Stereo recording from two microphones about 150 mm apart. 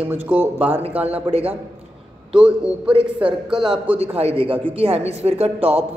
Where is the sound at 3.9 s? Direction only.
40° right (ahead or behind).